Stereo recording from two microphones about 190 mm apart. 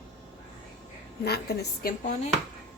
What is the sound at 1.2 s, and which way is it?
Speech, 60° left (ahead or behind).